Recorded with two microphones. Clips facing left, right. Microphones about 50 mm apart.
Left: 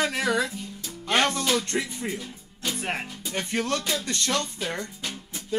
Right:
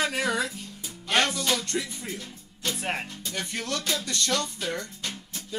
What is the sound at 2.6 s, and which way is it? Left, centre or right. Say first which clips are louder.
Music: left 1 dB; centre.